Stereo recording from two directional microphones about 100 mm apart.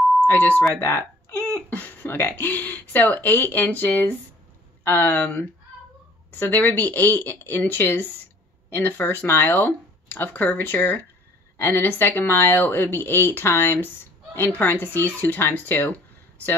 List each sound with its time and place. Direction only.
0.2 s speech: 20° left (ahead or behind)